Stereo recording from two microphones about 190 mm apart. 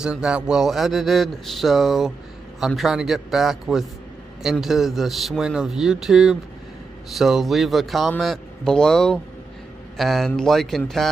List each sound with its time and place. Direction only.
0.0 s a man's voice: 5° right (ahead or behind)